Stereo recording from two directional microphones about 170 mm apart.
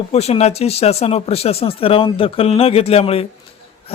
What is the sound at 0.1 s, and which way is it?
Speech, 40° left (ahead or behind).